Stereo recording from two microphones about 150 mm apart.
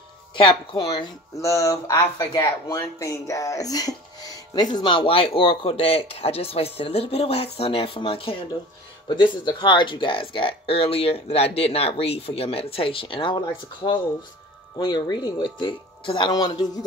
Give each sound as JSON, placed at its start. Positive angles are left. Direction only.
{"t": 0.4, "sound": "speech", "side_deg": 30}